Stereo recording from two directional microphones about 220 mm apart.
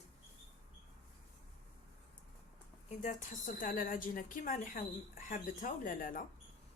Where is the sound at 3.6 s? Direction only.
40° left (ahead or behind).